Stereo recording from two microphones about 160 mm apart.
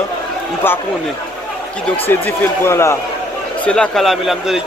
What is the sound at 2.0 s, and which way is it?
A man's voice, 15° left (ahead or behind).